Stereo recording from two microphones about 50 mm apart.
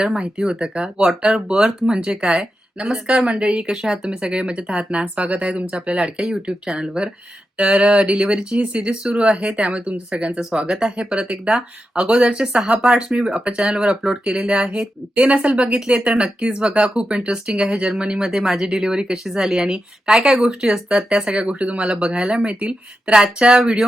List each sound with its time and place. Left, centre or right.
0.2 s speech: centre
6.1 s speech: centre
17.8 s speech: centre